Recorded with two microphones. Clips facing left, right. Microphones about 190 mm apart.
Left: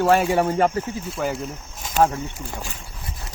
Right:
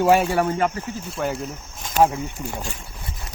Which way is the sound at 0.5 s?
40° left (ahead or behind).